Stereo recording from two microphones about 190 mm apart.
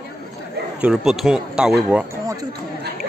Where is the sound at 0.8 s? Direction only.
Centre (ahead or behind).